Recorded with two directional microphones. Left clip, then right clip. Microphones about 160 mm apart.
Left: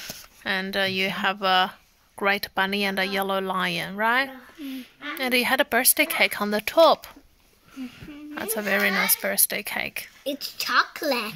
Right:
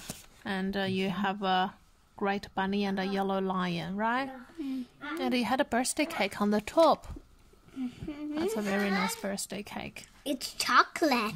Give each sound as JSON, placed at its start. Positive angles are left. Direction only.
{"t": 0.1, "sound": "speech", "side_deg": -5}
{"t": 8.4, "sound": "speech", "side_deg": 5}
{"t": 10.2, "sound": "a woman's voice", "side_deg": -90}